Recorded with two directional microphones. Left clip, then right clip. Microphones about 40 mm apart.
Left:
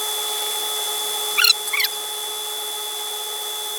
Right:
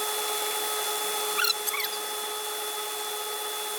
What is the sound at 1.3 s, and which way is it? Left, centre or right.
Mouse, left.